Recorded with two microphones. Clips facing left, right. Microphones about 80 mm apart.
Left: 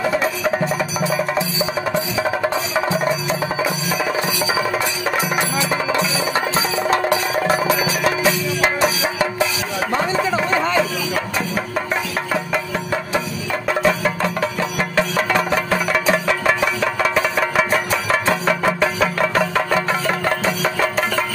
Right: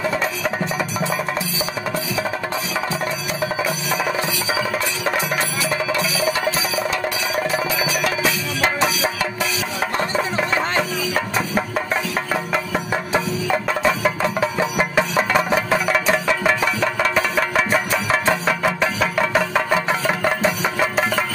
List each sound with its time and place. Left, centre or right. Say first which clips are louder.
0.9 s music: left 3 dB; centre
5.6 s music: left 2 dB; left
6.9 s music: left 5 dB; left
8.5 s music: left 2 dB; left
13.8 s music: left 1 dB; centre